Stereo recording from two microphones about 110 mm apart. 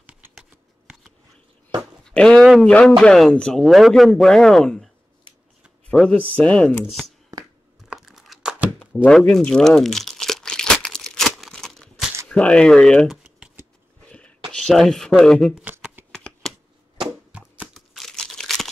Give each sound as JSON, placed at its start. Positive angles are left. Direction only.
{"t": 0.3, "sound": "shuffling cards", "side_deg": -5}
{"t": 2.0, "sound": "a sound", "side_deg": 5}
{"t": 2.6, "sound": "a man's voice", "side_deg": 10}
{"t": 5.9, "sound": "speech", "side_deg": 10}
{"t": 6.8, "sound": "a man's voice", "side_deg": 0}
{"t": 7.9, "sound": "crunch", "side_deg": -5}
{"t": 8.7, "sound": "crumpling", "side_deg": 10}
{"t": 12.3, "sound": "speech", "side_deg": 10}
{"t": 14.5, "sound": "a man's voice", "side_deg": 0}
{"t": 15.6, "sound": "shuffling cards", "side_deg": -15}
{"t": 17.3, "sound": "a sound", "side_deg": -10}
{"t": 17.7, "sound": "crumpling", "side_deg": 5}